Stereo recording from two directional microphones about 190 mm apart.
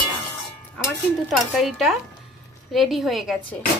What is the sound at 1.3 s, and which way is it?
A woman's voice, centre (ahead or behind).